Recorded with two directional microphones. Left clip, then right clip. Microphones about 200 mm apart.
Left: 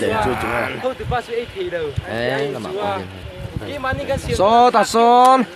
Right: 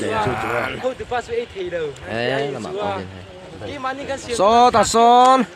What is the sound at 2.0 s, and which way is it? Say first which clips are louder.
Speech: even; 15° right (ahead or behind).